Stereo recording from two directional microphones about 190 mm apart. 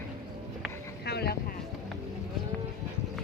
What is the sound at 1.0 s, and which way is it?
Boat, 55° left (ahead or behind).